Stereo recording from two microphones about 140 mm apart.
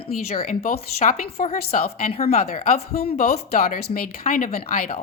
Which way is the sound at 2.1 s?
50° left (ahead or behind).